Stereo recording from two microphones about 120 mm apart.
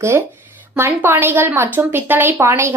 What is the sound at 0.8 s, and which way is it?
A woman's voice, 20° right (ahead or behind).